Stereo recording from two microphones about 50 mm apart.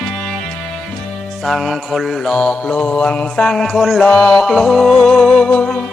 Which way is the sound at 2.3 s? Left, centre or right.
Centre.